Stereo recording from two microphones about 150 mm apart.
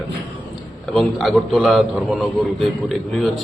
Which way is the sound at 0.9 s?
Centre (ahead or behind).